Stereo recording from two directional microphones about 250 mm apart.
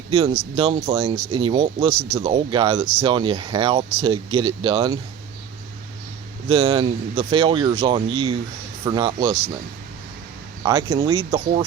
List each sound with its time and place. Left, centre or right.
0.1 s speech: right
6.5 s speech: right
10.6 s speech: centre